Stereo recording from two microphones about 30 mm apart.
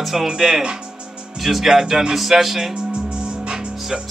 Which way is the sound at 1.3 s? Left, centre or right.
Centre.